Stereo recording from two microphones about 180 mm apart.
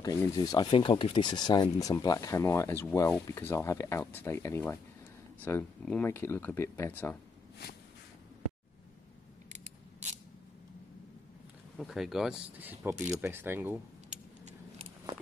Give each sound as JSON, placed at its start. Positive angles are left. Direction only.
{"t": 0.0, "sound": "speech", "side_deg": 20}
{"t": 11.7, "sound": "speech", "side_deg": 0}